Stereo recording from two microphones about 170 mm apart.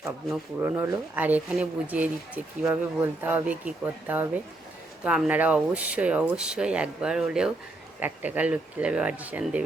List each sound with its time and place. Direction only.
0.6 s speech: 15° right (ahead or behind)